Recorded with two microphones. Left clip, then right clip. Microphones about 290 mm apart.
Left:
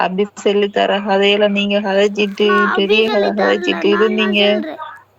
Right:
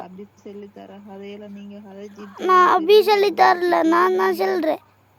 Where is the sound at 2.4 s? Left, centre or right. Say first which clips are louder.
Even; centre.